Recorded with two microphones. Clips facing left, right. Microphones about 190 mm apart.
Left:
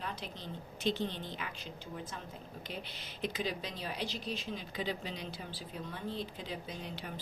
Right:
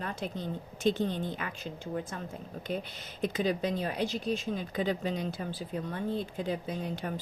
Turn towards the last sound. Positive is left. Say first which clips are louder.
# right 8 dB
turn(degrees=-50)  # may be behind; listen again after turning